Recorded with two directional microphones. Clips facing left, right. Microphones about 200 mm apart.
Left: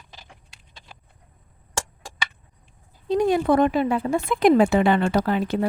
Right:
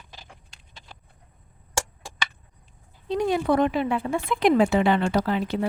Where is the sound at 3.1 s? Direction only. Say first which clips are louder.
Left 3 dB; 45° left (ahead or behind).